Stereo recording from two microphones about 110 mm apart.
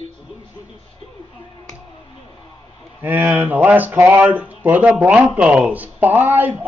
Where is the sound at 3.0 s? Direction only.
20° right (ahead or behind).